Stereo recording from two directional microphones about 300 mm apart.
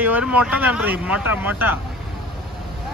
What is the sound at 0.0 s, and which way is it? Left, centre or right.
Speech, centre.